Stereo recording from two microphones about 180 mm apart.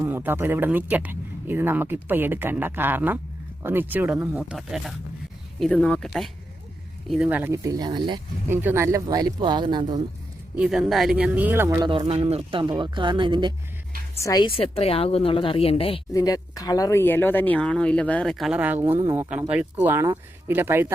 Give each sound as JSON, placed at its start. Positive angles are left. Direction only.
{"t": 0.0, "sound": "speech", "side_deg": -10}
{"t": 8.4, "sound": "speech", "side_deg": -10}
{"t": 10.6, "sound": "speech", "side_deg": 0}
{"t": 11.9, "sound": "speech", "side_deg": -30}
{"t": 14.2, "sound": "a woman's voice", "side_deg": 20}
{"t": 14.4, "sound": "speech", "side_deg": 30}
{"t": 16.1, "sound": "speech", "side_deg": 20}